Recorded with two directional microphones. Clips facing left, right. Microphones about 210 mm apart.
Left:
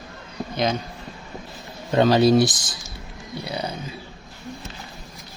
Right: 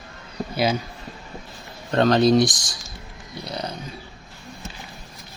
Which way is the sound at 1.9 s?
5° left (ahead or behind).